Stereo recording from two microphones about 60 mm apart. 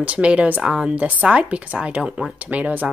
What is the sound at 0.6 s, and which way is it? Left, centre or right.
Speech, centre.